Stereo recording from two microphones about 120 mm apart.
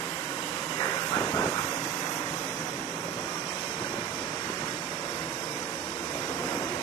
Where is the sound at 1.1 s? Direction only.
30° left (ahead or behind).